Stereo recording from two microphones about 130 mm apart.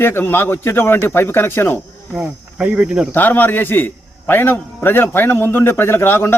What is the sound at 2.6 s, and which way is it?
Speech, 10° right (ahead or behind).